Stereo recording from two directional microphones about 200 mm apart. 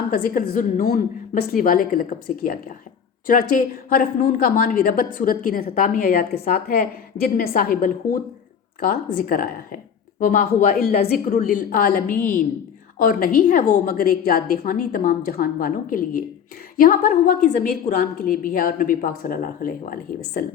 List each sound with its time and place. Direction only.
0.1 s a woman's voice: 45° left (ahead or behind)